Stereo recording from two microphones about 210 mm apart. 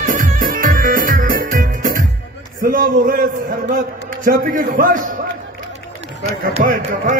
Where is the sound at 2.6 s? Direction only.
40° right (ahead or behind).